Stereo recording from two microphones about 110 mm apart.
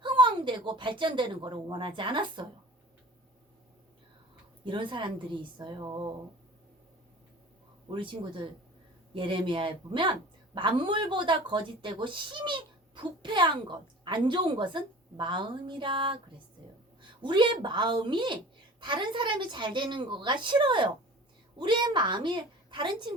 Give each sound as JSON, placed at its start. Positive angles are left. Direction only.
{"t": 0.0, "sound": "speech", "side_deg": -45}
{"t": 4.6, "sound": "a woman's voice", "side_deg": -45}
{"t": 7.9, "sound": "a woman's voice", "side_deg": -50}